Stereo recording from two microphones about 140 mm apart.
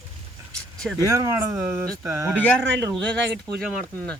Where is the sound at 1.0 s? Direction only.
25° right (ahead or behind).